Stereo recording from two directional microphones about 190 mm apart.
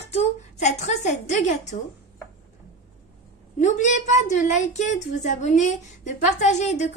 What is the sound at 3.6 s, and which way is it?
A woman's voice, 40° left (ahead or behind).